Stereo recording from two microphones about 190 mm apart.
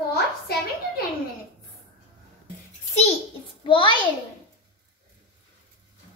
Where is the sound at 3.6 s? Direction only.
25° left (ahead or behind).